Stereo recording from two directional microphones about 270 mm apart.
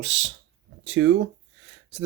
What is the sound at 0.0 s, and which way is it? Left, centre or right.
Speech, right.